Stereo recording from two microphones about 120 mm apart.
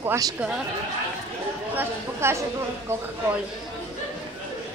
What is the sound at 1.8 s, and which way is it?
A woman's voice, 20° right (ahead or behind).